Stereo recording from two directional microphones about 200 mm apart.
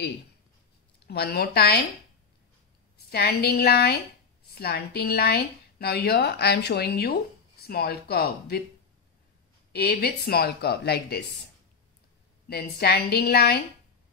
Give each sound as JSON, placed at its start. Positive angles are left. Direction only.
{"t": 1.0, "sound": "speech", "side_deg": 50}
{"t": 3.1, "sound": "speech", "side_deg": 55}
{"t": 9.7, "sound": "speech", "side_deg": 50}
{"t": 12.4, "sound": "speech", "side_deg": 50}